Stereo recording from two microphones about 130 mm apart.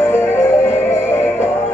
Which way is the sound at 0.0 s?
20° left (ahead or behind).